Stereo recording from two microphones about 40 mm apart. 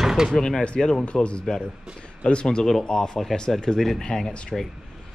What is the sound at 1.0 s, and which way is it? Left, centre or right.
Speech, left.